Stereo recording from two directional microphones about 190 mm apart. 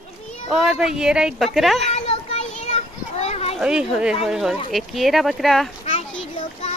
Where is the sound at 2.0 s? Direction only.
35° left (ahead or behind).